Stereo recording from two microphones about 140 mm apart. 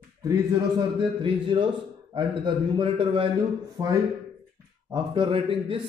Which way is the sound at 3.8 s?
25° right (ahead or behind).